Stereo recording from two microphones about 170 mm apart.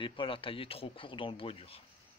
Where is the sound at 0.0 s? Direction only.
30° left (ahead or behind).